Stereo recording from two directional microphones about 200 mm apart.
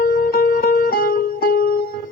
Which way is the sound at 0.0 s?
50° left (ahead or behind).